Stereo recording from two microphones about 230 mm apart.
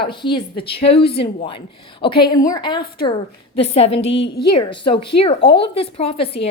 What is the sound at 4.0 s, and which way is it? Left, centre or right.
Speech, left.